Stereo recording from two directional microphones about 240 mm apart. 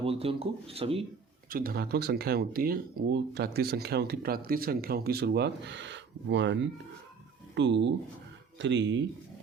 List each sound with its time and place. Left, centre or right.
0.0 s speech: right
1.5 s speech: right